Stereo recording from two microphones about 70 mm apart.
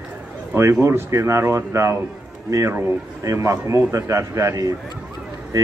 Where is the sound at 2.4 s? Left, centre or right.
Right.